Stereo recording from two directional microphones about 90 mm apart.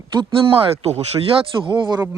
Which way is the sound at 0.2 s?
75° right (ahead or behind).